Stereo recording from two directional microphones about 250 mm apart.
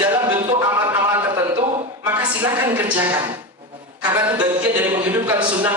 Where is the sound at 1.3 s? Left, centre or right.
Centre.